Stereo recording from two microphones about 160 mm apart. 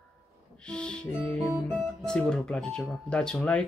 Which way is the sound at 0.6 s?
5° left (ahead or behind).